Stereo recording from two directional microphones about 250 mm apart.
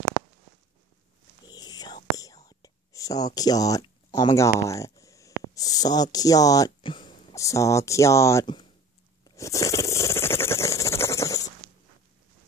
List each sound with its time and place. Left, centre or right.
1.4 s a sound: centre
2.1 s whispering: centre
5.5 s speech: centre
9.2 s scrape: centre